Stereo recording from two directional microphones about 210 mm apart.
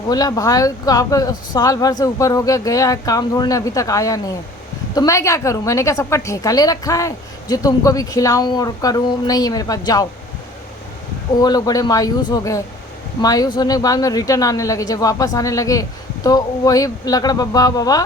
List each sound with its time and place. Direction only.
0.1 s a woman's voice: 15° left (ahead or behind)
11.3 s a woman's voice: 20° left (ahead or behind)